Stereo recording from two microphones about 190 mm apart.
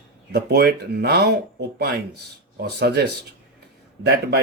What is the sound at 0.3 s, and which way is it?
Speech, 55° right (ahead or behind).